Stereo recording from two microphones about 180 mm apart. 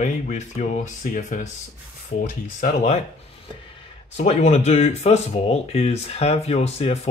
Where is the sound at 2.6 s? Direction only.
40° left (ahead or behind).